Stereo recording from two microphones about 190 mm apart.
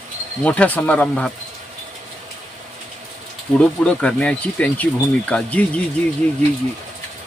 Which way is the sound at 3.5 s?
5° left (ahead or behind).